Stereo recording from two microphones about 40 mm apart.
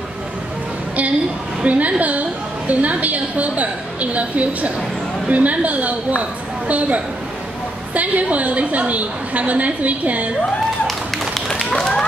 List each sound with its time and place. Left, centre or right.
1.6 s a woman's voice: right
10.9 s tap: centre
11.5 s run: centre